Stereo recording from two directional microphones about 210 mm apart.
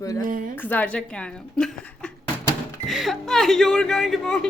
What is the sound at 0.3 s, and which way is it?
Speech, 40° right (ahead or behind).